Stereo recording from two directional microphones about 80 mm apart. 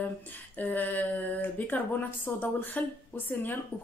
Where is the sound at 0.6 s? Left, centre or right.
Left.